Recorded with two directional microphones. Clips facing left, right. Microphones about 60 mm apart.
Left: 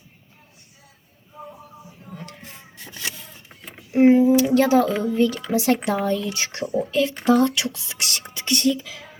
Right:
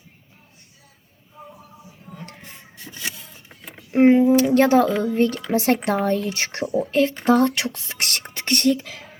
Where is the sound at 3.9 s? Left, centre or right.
Right.